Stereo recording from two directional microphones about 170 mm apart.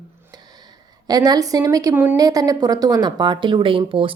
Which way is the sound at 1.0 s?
25° right (ahead or behind).